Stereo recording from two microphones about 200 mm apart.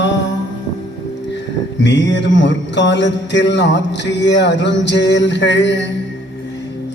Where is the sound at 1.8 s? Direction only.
65° left (ahead or behind).